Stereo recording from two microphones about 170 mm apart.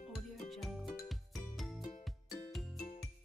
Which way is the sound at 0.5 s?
Centre (ahead or behind).